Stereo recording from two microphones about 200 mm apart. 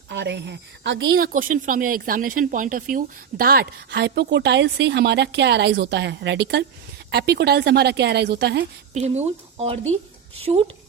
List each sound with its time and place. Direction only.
0.1 s speech: 60° right (ahead or behind)
1.1 s speech: 45° right (ahead or behind)
8.9 s speech: 35° right (ahead or behind)